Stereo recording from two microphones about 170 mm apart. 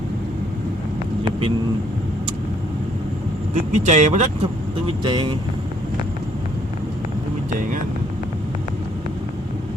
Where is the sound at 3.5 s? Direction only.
45° right (ahead or behind).